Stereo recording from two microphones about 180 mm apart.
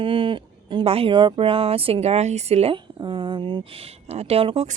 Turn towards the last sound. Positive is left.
turn(degrees=-35)  # may be behind; listen again after turning